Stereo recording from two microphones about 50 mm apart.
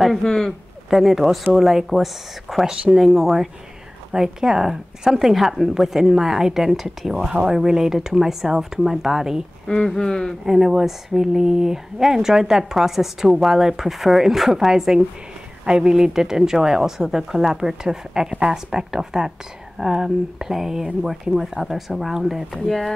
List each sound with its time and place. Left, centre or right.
0.2 s speech: centre
0.5 s speech: centre
2.6 s speech: centre
9.7 s speech: centre
10.4 s speech: centre
22.7 s speech: centre